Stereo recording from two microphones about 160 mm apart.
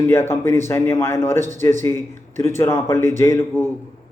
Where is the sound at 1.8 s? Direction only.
15° left (ahead or behind).